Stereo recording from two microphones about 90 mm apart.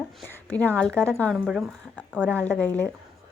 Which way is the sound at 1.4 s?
10° right (ahead or behind).